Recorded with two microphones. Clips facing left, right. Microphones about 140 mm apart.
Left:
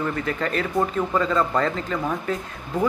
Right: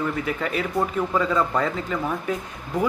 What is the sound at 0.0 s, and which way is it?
Speech, 5° right (ahead or behind).